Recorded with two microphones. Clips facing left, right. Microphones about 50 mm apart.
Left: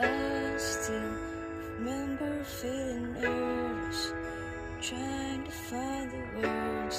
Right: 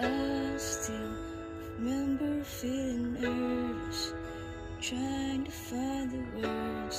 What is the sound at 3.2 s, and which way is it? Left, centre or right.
Music, left.